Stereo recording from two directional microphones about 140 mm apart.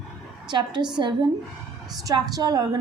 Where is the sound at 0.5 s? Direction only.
30° right (ahead or behind).